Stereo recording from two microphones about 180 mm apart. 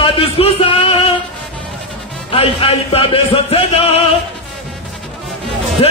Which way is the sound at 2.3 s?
30° left (ahead or behind).